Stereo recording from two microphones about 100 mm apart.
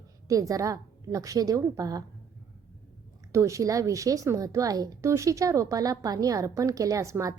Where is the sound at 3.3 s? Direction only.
30° right (ahead or behind).